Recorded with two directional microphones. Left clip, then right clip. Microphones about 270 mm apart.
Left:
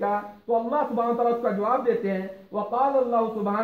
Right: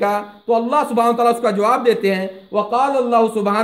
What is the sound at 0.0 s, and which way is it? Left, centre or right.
Speech, right.